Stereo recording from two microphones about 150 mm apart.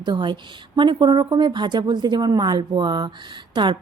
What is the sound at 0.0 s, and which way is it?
A woman's voice, 30° right (ahead or behind).